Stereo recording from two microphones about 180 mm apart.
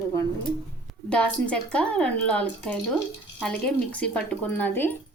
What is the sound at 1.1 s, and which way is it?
Speech, 5° left (ahead or behind).